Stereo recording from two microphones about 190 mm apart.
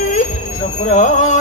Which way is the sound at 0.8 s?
40° left (ahead or behind).